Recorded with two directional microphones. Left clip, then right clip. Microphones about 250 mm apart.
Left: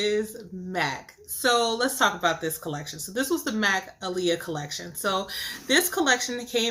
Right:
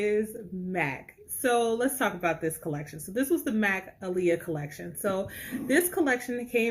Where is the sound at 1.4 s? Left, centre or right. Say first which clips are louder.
Left 3 dB; centre.